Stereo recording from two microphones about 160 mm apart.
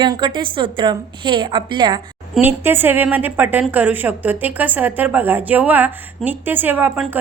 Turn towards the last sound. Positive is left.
turn(degrees=-10)  # may be behind; listen again after turning